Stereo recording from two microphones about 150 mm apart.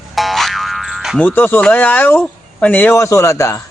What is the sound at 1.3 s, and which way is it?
A man's voice, 15° left (ahead or behind).